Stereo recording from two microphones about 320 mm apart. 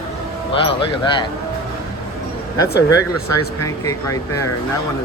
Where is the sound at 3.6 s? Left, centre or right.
Centre.